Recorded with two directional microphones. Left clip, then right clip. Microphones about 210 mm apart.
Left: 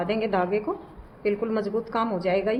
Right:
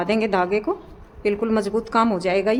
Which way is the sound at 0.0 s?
30° right (ahead or behind).